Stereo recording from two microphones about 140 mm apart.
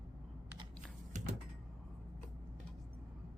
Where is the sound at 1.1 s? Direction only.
60° right (ahead or behind).